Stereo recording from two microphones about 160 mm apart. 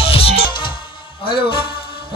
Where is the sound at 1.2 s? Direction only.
30° left (ahead or behind).